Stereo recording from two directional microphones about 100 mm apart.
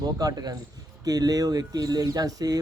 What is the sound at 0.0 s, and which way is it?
Speech, 40° right (ahead or behind).